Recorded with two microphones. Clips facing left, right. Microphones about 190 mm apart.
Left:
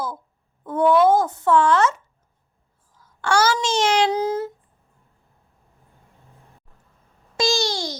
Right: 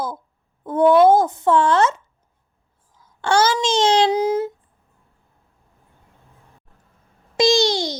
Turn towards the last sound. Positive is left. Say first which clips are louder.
# right 6 dB
turn(degrees=-20)  # may be behind; listen again after turning